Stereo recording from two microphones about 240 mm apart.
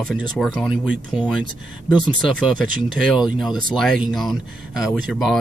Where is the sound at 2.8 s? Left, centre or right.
Centre.